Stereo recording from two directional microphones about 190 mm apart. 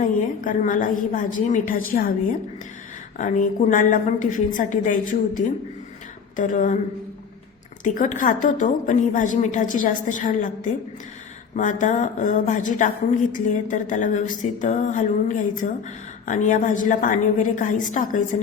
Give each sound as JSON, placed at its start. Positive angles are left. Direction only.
{"t": 0.0, "sound": "a woman's voice", "side_deg": 45}
{"t": 3.2, "sound": "a woman's voice", "side_deg": 40}
{"t": 6.3, "sound": "a sound", "side_deg": 40}
{"t": 7.9, "sound": "a woman's voice", "side_deg": 40}
{"t": 11.5, "sound": "a sound", "side_deg": 40}
{"t": 16.2, "sound": "a woman's voice", "side_deg": 45}